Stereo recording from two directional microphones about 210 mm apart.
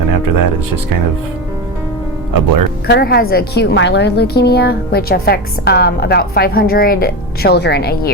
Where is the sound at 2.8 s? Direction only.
50° left (ahead or behind).